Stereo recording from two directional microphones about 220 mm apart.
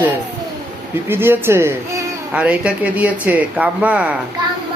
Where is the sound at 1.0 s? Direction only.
10° right (ahead or behind).